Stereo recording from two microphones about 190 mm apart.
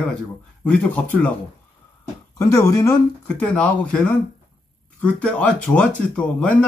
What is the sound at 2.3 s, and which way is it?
Speech, 15° left (ahead or behind).